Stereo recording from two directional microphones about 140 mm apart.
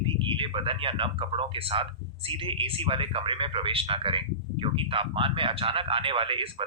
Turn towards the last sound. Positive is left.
turn(degrees=-40)  # may be behind; listen again after turning